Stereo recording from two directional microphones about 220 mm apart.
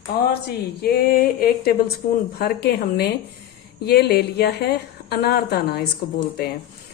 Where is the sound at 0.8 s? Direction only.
45° left (ahead or behind).